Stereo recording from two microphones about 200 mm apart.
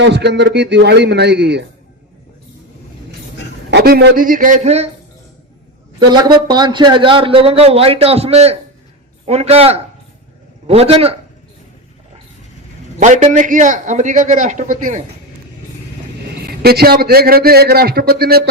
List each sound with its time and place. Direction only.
0.0 s a man's voice: 60° right (ahead or behind)
3.7 s a man's voice: 55° right (ahead or behind); by 4.9 s 35° right (ahead or behind)
6.0 s a man's voice: 20° right (ahead or behind)
13.0 s a man's voice: 35° right (ahead or behind)
16.6 s a man's voice: 50° right (ahead or behind)